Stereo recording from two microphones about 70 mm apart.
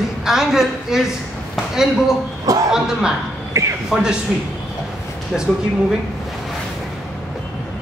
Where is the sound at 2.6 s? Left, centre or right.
Centre.